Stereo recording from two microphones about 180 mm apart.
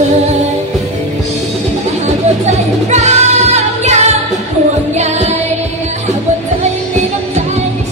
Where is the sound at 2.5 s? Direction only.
40° right (ahead or behind).